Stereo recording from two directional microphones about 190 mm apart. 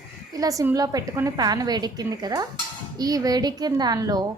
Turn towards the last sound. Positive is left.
turn(degrees=-20)  # may be behind; listen again after turning